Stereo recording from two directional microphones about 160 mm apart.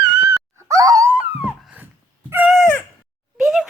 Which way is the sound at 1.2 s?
10° right (ahead or behind).